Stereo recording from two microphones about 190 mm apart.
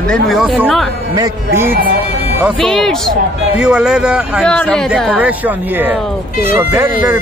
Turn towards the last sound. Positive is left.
turn(degrees=-10)  # may be behind; listen again after turning